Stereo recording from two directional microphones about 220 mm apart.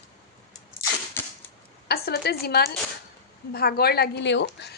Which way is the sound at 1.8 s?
45° left (ahead or behind).